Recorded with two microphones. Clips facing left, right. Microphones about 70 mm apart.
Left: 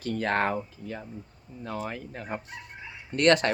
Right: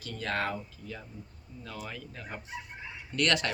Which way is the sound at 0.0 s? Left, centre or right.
Left.